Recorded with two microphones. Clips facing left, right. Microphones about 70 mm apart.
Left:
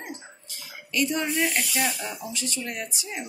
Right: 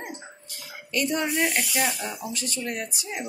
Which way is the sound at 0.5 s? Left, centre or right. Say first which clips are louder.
Right 1 dB; right.